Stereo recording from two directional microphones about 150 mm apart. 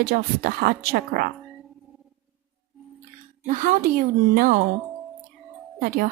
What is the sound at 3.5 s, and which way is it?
A woman's voice, 60° right (ahead or behind).